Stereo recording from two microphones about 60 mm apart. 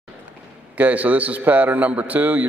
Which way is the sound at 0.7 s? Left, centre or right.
Right.